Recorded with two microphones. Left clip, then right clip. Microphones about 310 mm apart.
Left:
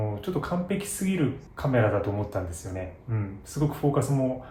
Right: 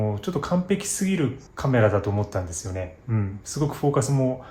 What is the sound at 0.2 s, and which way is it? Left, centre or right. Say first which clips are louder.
Speech: right 3 dB; right.